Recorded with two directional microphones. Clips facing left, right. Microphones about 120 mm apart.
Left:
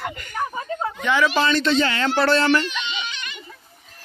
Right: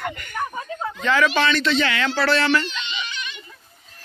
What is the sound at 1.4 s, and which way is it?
Speech, 40° left (ahead or behind).